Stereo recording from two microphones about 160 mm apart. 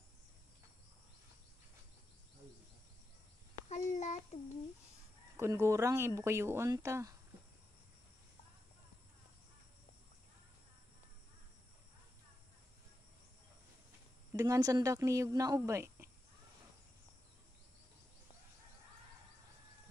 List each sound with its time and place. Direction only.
3.6 s child singing: 45° left (ahead or behind)
5.4 s speech: 15° right (ahead or behind)
14.3 s speech: 20° right (ahead or behind)